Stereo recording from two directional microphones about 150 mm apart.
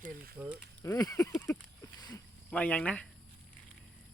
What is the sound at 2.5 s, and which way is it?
Speech, 10° left (ahead or behind).